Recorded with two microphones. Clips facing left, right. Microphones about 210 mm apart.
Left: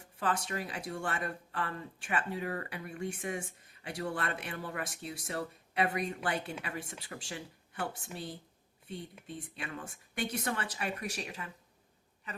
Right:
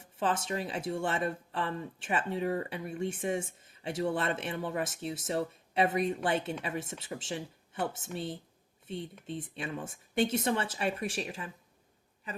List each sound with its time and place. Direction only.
0.0 s speech: 25° right (ahead or behind)
9.2 s speech: 25° right (ahead or behind)